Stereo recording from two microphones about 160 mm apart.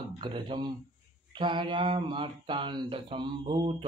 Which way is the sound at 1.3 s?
30° right (ahead or behind).